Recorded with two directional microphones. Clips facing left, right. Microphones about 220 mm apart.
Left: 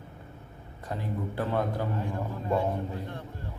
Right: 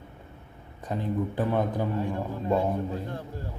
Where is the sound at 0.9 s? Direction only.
20° right (ahead or behind).